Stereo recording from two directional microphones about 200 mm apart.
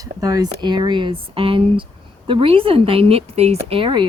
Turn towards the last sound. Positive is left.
turn(degrees=-25)  # may be behind; listen again after turning